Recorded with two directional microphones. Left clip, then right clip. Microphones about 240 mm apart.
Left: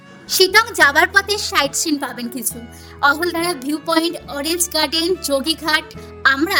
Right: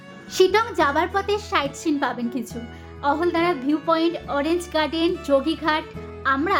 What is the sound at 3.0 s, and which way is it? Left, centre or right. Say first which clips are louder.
Speech: left 6 dB; left.